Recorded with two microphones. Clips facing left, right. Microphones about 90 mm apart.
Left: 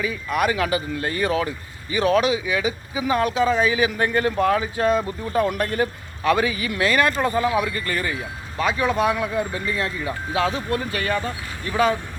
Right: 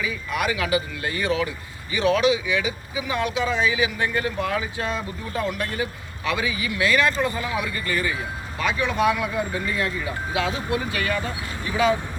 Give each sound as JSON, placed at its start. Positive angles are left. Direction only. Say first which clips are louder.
{"t": 0.0, "sound": "speech", "louder": "left 3 dB", "side_deg": 40}
{"t": 10.3, "sound": "speech", "louder": "left 2 dB", "side_deg": 35}